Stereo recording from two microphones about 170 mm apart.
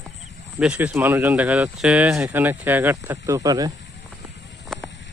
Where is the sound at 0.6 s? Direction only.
5° right (ahead or behind).